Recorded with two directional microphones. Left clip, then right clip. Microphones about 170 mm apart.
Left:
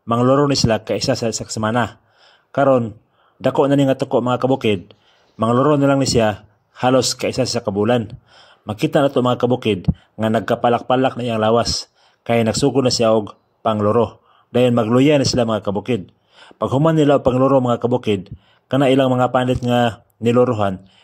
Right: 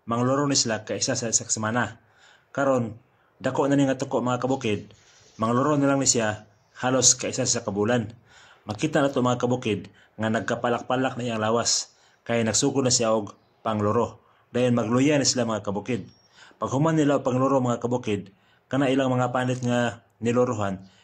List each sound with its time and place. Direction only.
0.0 s a man's voice: 45° left (ahead or behind)